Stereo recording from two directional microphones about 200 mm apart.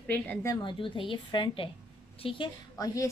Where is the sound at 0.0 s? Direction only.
10° left (ahead or behind).